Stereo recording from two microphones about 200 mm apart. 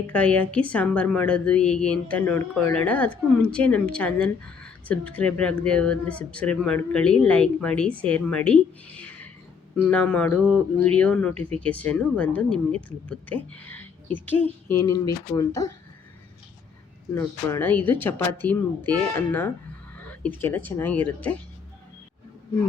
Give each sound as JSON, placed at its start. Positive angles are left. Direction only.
{"t": 0.1, "sound": "a woman's voice", "side_deg": 5}
{"t": 17.2, "sound": "a woman's voice", "side_deg": 10}
{"t": 20.1, "sound": "a sound", "side_deg": 10}
{"t": 20.7, "sound": "a woman's voice", "side_deg": 10}